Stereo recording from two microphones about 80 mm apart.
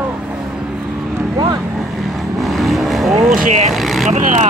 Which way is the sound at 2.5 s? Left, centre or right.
Centre.